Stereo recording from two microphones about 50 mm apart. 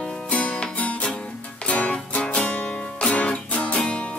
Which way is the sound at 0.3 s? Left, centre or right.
Left.